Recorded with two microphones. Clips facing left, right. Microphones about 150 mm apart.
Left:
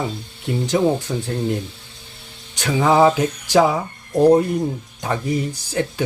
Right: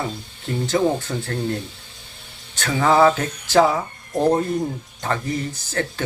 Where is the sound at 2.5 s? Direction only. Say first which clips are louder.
Left 1 dB; 15° left (ahead or behind).